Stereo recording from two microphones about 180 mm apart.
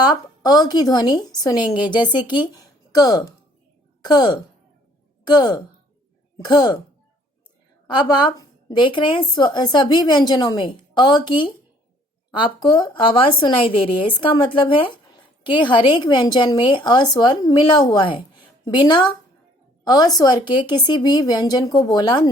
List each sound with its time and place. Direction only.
0.0 s a woman's voice: 20° left (ahead or behind)
7.9 s a woman's voice: 25° left (ahead or behind)